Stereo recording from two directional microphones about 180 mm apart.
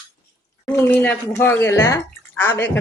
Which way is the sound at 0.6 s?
10° left (ahead or behind).